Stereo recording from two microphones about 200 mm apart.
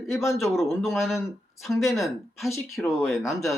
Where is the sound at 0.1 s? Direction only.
15° left (ahead or behind).